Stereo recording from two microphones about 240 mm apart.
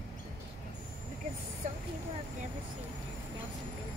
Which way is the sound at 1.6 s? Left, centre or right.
Right.